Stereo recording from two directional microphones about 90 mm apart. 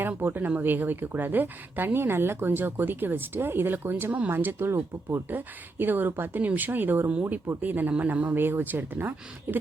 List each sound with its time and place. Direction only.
0.0 s speech: 25° right (ahead or behind)